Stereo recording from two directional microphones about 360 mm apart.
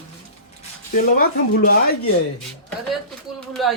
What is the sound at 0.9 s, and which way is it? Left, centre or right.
Speech, left.